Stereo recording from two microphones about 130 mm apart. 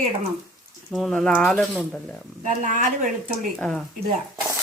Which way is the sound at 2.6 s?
65° right (ahead or behind).